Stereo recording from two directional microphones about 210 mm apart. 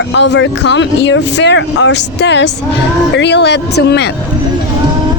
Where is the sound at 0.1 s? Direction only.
55° left (ahead or behind).